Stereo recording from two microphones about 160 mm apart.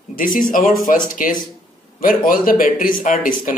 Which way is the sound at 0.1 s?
60° left (ahead or behind).